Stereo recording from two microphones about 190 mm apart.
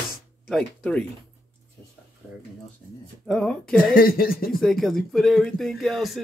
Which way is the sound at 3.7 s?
50° left (ahead or behind).